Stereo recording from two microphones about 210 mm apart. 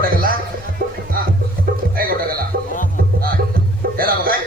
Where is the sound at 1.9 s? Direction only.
45° right (ahead or behind).